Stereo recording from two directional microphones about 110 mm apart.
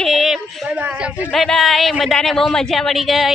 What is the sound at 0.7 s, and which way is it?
Speech, 10° right (ahead or behind).